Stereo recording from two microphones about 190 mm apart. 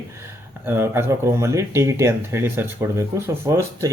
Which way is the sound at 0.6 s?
10° right (ahead or behind).